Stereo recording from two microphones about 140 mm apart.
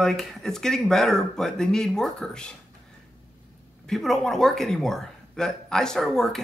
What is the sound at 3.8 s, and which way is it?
A man's voice, centre (ahead or behind).